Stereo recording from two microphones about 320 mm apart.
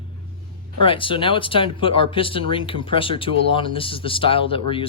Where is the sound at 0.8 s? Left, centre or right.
Centre.